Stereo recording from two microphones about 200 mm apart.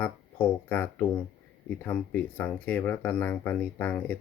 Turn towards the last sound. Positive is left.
turn(degrees=5)  # may be behind; listen again after turning